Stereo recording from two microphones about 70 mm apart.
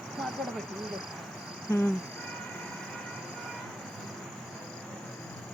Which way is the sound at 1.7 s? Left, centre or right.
Left.